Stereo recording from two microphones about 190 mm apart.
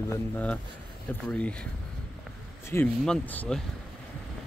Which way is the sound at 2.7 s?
10° left (ahead or behind).